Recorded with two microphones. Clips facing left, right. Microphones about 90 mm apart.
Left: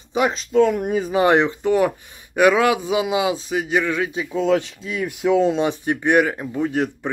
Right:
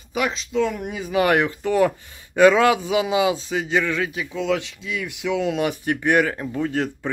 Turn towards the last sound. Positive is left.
turn(degrees=15)  # may be behind; listen again after turning